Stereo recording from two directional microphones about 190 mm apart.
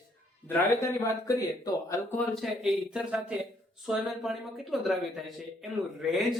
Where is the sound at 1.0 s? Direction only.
15° left (ahead or behind).